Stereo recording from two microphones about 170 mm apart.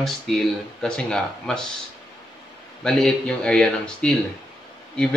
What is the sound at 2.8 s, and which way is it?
Speech, centre (ahead or behind).